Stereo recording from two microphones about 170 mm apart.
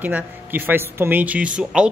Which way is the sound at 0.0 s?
10° right (ahead or behind).